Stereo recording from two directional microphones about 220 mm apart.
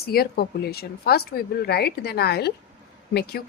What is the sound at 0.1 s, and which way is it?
Speech, 45° left (ahead or behind).